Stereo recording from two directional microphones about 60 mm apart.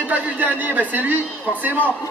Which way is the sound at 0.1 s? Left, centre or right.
Right.